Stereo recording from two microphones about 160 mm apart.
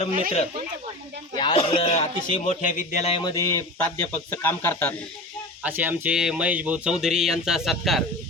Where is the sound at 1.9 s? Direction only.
45° left (ahead or behind).